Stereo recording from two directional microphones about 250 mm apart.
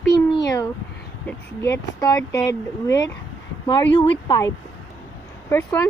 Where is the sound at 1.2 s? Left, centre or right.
Centre.